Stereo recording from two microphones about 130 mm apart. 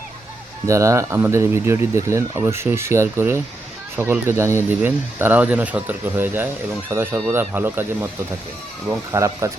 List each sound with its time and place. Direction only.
0.7 s speech: 20° right (ahead or behind)